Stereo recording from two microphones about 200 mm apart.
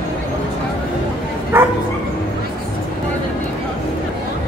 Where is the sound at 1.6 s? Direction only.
10° right (ahead or behind).